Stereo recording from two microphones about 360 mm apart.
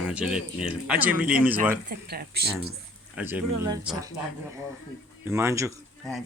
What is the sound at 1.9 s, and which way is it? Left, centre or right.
Speech, right.